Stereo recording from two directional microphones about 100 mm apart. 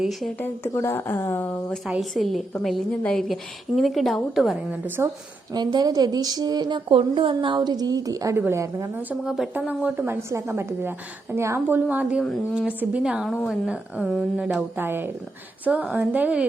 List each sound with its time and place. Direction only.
0.0 s a woman's voice: centre (ahead or behind)
0.4 s speech: 25° left (ahead or behind)
1.9 s a woman's voice: centre (ahead or behind)
5.0 s a woman's voice: 25° right (ahead or behind)
5.5 s a woman's voice: 45° right (ahead or behind)
9.2 s a woman's voice: 5° right (ahead or behind)
9.6 s a woman's voice: 15° right (ahead or behind)
10.2 s a woman's voice: 25° right (ahead or behind); by 13.2 s 10° right (ahead or behind)
13.2 s a woman's voice: centre (ahead or behind)
13.7 s a woman's voice: 10° right (ahead or behind)